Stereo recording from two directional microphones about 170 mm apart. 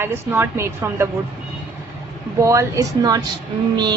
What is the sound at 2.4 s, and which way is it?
Speech, 20° right (ahead or behind).